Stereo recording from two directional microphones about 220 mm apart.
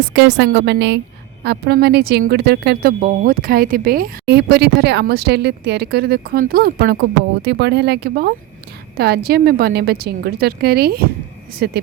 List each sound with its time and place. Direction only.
0.1 s a woman's voice: 55° right (ahead or behind)